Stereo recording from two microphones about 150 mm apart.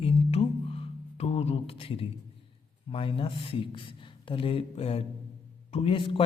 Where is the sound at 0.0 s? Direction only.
40° left (ahead or behind).